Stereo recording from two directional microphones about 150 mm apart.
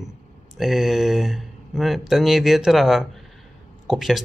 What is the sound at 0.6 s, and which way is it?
Speech, centre (ahead or behind).